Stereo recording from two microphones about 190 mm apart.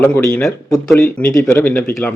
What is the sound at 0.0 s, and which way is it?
A man's voice, 10° left (ahead or behind).